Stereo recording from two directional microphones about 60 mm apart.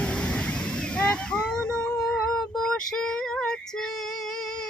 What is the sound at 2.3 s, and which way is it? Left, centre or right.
Female singing, centre.